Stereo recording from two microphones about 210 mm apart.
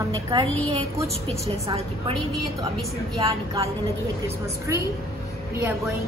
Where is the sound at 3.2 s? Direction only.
15° right (ahead or behind).